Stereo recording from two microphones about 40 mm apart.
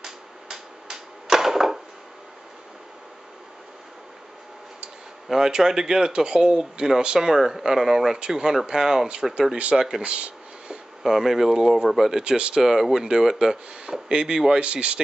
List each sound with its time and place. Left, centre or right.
0.0 s a sound: centre
5.3 s speech: centre
10.0 s a sound: right
11.0 s speech: centre
12.2 s speech: right
14.6 s speech: right